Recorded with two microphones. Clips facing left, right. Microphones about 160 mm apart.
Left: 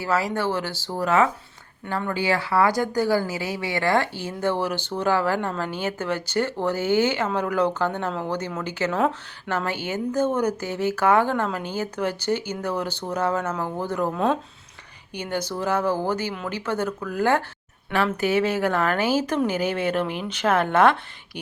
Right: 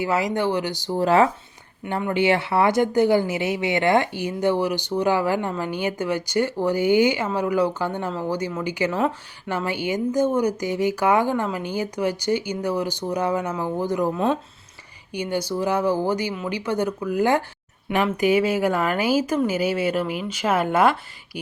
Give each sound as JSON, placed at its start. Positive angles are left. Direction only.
{"t": 0.0, "sound": "speech", "side_deg": -20}
{"t": 0.9, "sound": "speech", "side_deg": -30}
{"t": 1.8, "sound": "speech", "side_deg": -15}